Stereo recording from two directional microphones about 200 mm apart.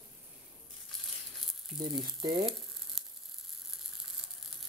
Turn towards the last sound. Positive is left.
turn(degrees=0)  # may be behind; listen again after turning